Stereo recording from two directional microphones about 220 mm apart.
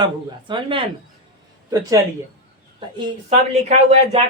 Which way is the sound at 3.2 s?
30° right (ahead or behind).